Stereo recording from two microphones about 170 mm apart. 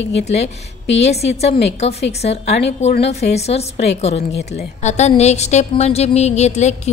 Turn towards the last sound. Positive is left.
turn(degrees=40)  # may be behind; listen again after turning